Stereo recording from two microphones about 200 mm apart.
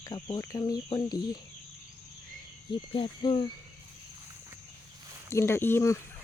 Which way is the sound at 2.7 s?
25° left (ahead or behind).